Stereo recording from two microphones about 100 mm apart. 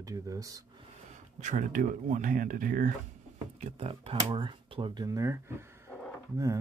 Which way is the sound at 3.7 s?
75° right (ahead or behind).